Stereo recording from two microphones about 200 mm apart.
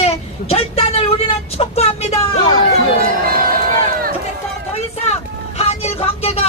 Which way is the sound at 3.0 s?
45° right (ahead or behind).